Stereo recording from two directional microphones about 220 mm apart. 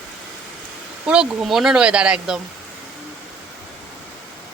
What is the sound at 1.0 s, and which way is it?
Speech, 5° right (ahead or behind).